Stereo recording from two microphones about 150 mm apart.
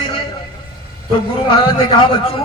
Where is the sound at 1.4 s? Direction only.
35° left (ahead or behind).